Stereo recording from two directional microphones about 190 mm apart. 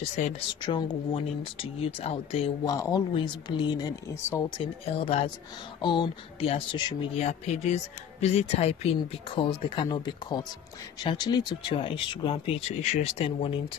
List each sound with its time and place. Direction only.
0.2 s speech: 40° left (ahead or behind)
0.6 s speech: 25° left (ahead or behind)
4.6 s speech: 30° left (ahead or behind)